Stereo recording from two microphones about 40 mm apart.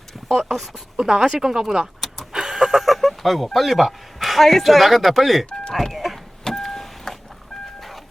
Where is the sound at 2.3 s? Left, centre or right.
Centre.